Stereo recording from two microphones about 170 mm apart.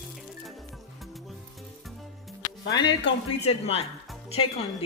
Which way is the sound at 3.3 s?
35° left (ahead or behind).